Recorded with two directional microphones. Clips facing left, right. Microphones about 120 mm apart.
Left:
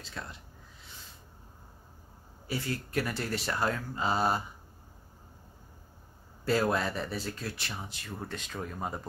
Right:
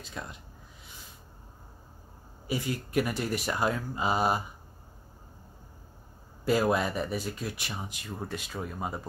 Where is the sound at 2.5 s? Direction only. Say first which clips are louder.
Right 3 dB; 15° right (ahead or behind).